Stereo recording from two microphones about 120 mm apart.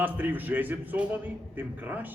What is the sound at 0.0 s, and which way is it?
A man's voice, 15° right (ahead or behind).